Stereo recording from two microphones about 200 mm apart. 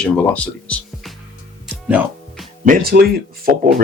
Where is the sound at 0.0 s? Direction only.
5° left (ahead or behind).